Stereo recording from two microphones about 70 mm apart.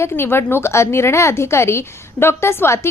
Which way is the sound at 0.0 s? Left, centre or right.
Left.